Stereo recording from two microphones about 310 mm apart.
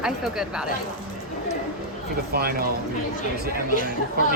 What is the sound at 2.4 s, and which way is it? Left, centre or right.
Speech, right.